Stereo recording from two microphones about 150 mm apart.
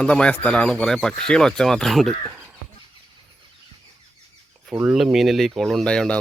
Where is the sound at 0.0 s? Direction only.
10° left (ahead or behind).